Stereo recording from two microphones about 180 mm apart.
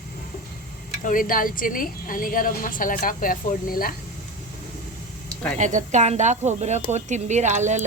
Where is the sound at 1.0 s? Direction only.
50° left (ahead or behind).